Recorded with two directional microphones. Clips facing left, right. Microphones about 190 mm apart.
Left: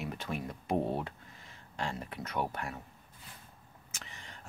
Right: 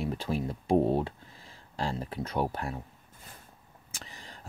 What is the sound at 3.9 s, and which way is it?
Vehicle, 35° right (ahead or behind).